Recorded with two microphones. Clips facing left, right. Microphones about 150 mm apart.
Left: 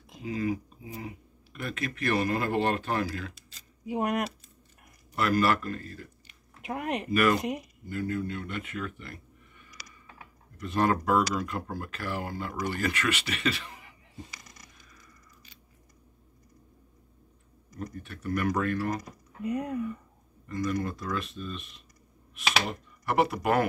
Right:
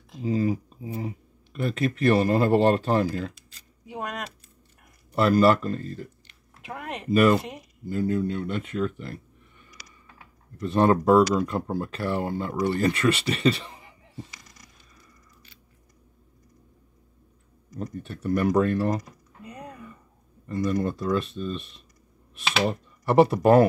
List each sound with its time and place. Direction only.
0.1 s speech: 35° right (ahead or behind)
3.9 s speech: 15° left (ahead or behind)
5.1 s speech: 30° right (ahead or behind)
6.7 s speech: 15° left (ahead or behind)
7.1 s speech: 30° right (ahead or behind)
10.6 s speech: 30° right (ahead or behind)
17.7 s speech: 30° right (ahead or behind)
20.4 s speech: 30° right (ahead or behind)